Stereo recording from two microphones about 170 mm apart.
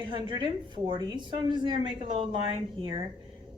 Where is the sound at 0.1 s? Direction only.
25° right (ahead or behind).